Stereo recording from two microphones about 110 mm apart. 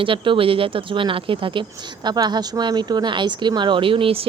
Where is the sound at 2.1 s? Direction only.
40° right (ahead or behind).